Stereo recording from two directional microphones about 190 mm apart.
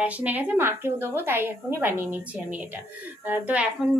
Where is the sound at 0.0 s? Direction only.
10° right (ahead or behind).